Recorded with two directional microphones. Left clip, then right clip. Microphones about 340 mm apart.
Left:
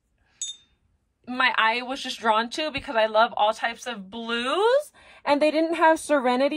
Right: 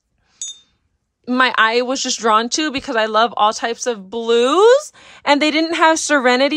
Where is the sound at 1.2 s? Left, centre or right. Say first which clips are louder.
Right 7 dB; centre.